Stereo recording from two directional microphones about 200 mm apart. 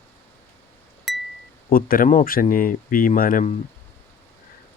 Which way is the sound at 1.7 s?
45° left (ahead or behind).